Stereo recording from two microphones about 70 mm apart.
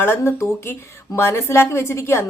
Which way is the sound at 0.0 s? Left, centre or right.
Left.